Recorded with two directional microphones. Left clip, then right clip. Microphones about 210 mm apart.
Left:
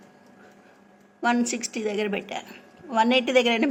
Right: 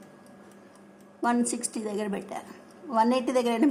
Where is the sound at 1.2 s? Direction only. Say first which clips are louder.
Left 3 dB; 5° right (ahead or behind).